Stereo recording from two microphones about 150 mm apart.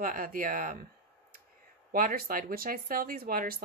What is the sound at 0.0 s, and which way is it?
Speech, 65° right (ahead or behind).